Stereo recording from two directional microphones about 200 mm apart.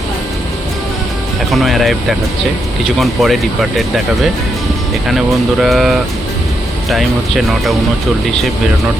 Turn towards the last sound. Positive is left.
turn(degrees=0)  # may be behind; listen again after turning